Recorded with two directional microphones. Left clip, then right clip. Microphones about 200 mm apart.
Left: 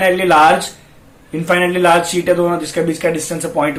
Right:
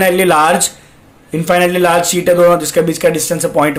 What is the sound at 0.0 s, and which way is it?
Speech, 45° right (ahead or behind).